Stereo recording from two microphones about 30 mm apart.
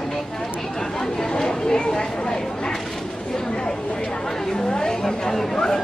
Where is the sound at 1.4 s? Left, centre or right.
Left.